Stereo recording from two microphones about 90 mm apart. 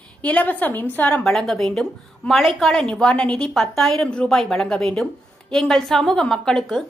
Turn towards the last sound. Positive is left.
turn(degrees=5)  # may be behind; listen again after turning